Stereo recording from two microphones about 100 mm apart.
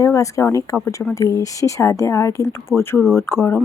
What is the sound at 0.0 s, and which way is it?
A woman's voice, 35° left (ahead or behind).